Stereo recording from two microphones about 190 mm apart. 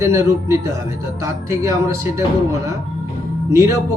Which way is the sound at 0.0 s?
15° right (ahead or behind).